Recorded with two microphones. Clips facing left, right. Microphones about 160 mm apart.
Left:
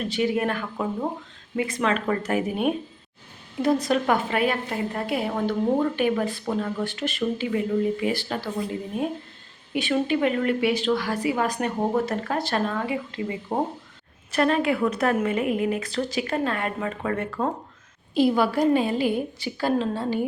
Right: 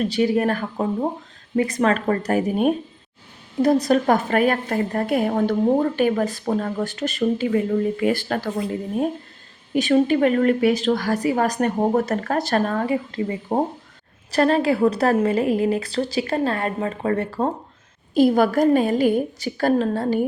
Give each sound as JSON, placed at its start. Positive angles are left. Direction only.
{"t": 0.1, "sound": "a woman's voice", "side_deg": -40}
{"t": 9.7, "sound": "a woman's voice", "side_deg": -40}
{"t": 18.1, "sound": "a woman's voice", "side_deg": -45}